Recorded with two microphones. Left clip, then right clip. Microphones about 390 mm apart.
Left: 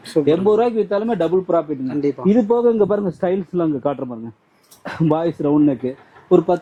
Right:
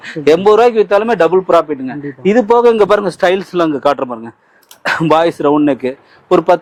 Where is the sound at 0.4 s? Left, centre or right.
Centre.